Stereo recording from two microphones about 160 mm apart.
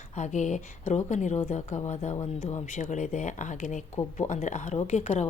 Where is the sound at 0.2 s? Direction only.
50° left (ahead or behind).